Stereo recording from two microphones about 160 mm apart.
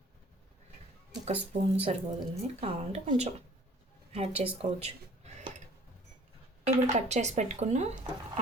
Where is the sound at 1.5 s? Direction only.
40° right (ahead or behind).